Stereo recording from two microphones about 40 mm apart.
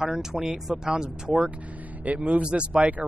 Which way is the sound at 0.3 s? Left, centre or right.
Centre.